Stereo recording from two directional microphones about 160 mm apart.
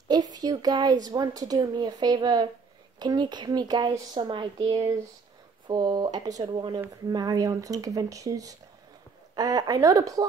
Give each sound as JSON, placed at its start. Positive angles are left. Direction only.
{"t": 0.1, "sound": "speech", "side_deg": -25}